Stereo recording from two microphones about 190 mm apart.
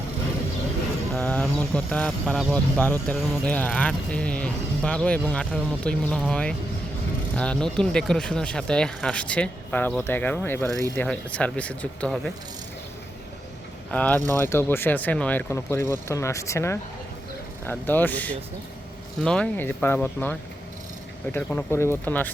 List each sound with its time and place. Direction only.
1.1 s speech: 5° left (ahead or behind)
13.9 s speech: 5° left (ahead or behind)
21.3 s speech: 10° left (ahead or behind)